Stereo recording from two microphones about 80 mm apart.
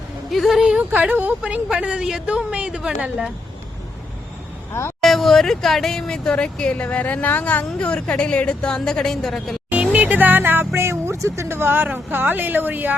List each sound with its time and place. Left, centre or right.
0.3 s a woman's voice: centre
0.8 s a woman's voice: right
4.7 s speech: left
5.0 s speech: centre
9.7 s music: centre
10.8 s speech: right